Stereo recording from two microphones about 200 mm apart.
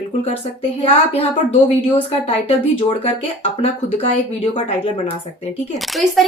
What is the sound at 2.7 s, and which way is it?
Speech, 25° left (ahead or behind).